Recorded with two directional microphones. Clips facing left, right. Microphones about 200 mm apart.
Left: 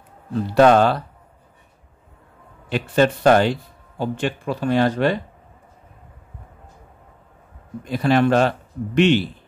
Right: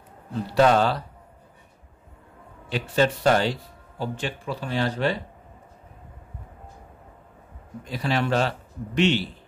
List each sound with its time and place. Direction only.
0.6 s a man's voice: 60° left (ahead or behind)
2.7 s a man's voice: 60° left (ahead or behind)
7.9 s a man's voice: 55° left (ahead or behind)